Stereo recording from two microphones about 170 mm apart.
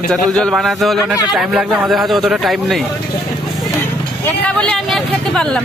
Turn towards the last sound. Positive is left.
turn(degrees=0)  # may be behind; listen again after turning